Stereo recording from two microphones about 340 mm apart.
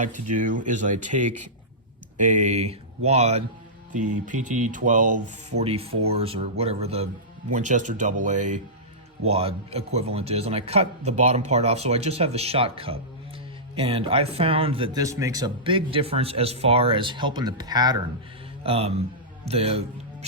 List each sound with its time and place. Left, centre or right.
0.0 s a man's voice: right